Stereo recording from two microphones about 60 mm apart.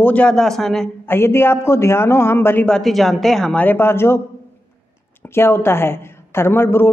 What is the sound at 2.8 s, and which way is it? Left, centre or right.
Speech, centre.